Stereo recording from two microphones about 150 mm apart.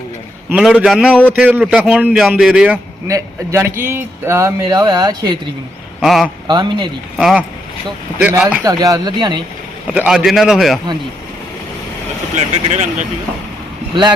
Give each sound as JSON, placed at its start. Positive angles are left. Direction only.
{"t": 0.5, "sound": "a man's voice", "side_deg": -5}
{"t": 3.1, "sound": "a man's voice", "side_deg": -20}
{"t": 6.0, "sound": "a man's voice", "side_deg": 0}
{"t": 6.5, "sound": "speech", "side_deg": -30}
{"t": 7.2, "sound": "a man's voice", "side_deg": -5}
{"t": 8.6, "sound": "a man's voice", "side_deg": -25}
{"t": 9.9, "sound": "a man's voice", "side_deg": -10}
{"t": 12.7, "sound": "speech", "side_deg": -50}
{"t": 13.9, "sound": "speech", "side_deg": -35}